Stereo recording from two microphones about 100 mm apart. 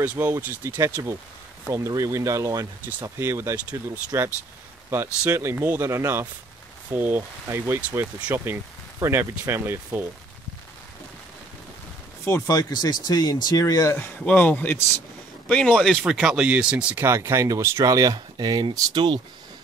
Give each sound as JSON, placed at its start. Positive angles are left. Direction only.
{"t": 0.0, "sound": "speech", "side_deg": -20}
{"t": 2.9, "sound": "speech", "side_deg": -15}
{"t": 12.4, "sound": "speech", "side_deg": 35}
{"t": 13.9, "sound": "speech", "side_deg": 15}
{"t": 16.9, "sound": "speech", "side_deg": -25}